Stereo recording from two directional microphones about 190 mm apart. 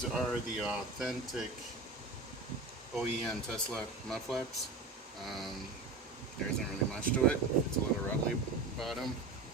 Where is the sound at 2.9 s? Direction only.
5° left (ahead or behind).